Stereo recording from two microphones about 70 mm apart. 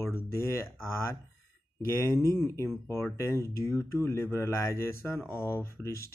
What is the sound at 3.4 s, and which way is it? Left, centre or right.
Speech, left.